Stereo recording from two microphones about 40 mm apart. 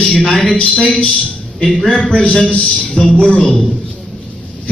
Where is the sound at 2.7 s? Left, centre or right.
Left.